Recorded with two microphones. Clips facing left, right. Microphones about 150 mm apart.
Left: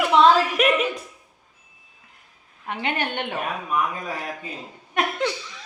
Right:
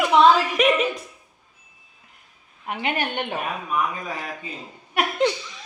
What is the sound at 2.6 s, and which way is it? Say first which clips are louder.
Speech: right 1 dB; 15° right (ahead or behind).